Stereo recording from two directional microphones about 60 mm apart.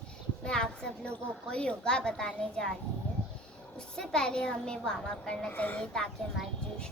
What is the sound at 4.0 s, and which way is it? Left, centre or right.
A woman's voice, centre.